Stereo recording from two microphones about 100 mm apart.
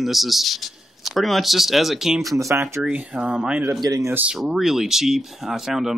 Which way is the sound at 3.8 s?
35° right (ahead or behind).